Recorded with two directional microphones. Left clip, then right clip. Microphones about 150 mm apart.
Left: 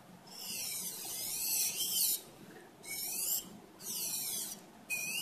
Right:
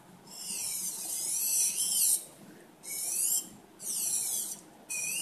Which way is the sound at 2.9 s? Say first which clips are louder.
Right 5 dB; centre (ahead or behind).